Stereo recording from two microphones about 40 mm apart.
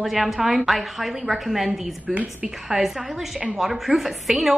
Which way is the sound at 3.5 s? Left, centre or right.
Centre.